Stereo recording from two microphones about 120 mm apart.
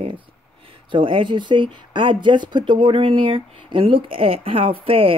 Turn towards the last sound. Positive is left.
turn(degrees=-50)  # may be behind; listen again after turning